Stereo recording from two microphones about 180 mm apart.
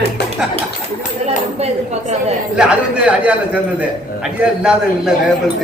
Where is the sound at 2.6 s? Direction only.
5° right (ahead or behind).